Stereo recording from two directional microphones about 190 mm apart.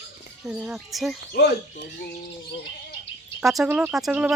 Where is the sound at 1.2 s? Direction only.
60° left (ahead or behind).